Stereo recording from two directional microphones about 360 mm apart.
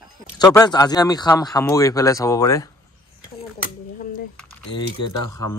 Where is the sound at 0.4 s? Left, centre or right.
Centre.